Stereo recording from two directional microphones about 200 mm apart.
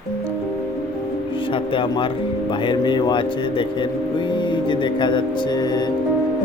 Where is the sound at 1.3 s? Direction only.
25° left (ahead or behind).